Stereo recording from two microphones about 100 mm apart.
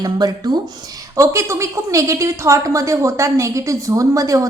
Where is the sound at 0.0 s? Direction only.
40° right (ahead or behind).